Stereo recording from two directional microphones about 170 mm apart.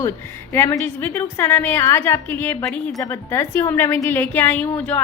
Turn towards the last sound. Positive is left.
turn(degrees=10)  # may be behind; listen again after turning